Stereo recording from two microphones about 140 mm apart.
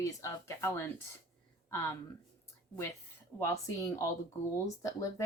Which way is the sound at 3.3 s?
20° left (ahead or behind).